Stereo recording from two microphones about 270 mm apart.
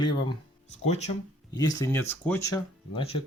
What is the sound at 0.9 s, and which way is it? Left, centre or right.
Speech, left.